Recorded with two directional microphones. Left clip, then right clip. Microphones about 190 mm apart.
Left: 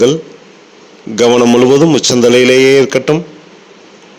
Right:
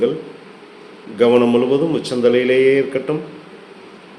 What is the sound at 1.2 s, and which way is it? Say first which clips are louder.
A man's voice: left 5 dB; 55° left (ahead or behind).